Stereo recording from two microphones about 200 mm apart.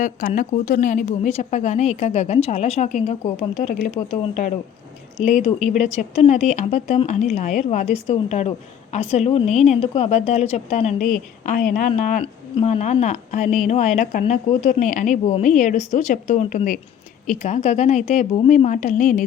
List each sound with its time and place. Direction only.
0.0 s a woman's voice: 40° left (ahead or behind)